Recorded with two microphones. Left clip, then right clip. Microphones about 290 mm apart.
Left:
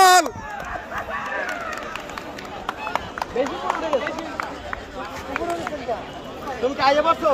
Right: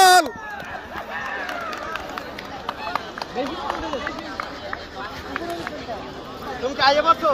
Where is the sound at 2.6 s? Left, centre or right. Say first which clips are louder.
Left 1 dB; centre.